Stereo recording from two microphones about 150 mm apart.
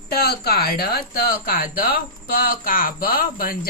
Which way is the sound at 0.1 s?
90° left.